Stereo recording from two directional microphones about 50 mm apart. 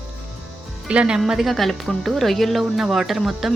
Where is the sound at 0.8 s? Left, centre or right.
Right.